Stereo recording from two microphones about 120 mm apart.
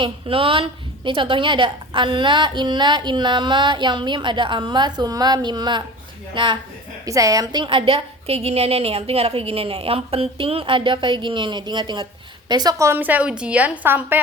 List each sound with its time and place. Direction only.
0.0 s a woman's voice: 50° right (ahead or behind)
7.0 s a woman's voice: 30° right (ahead or behind)
12.9 s a woman's voice: 15° right (ahead or behind)